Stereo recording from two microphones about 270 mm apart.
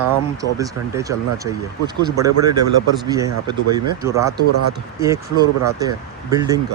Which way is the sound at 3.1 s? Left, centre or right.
Centre.